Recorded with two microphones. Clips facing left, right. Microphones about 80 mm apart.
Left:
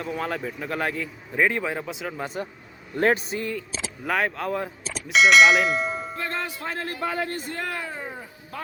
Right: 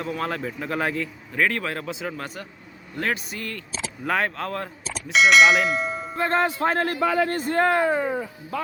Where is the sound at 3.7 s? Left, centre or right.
Centre.